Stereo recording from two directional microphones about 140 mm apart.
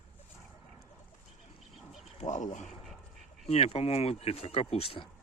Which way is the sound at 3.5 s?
50° left (ahead or behind).